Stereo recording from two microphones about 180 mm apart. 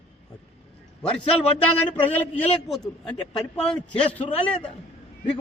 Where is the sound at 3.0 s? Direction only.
5° left (ahead or behind).